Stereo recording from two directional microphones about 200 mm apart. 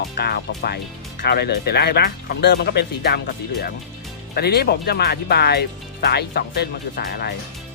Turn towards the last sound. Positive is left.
turn(degrees=50)  # may be behind; listen again after turning